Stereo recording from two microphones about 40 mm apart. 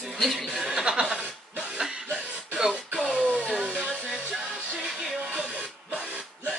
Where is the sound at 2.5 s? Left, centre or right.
Centre.